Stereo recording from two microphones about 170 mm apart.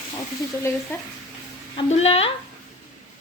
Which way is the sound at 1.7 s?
35° left (ahead or behind).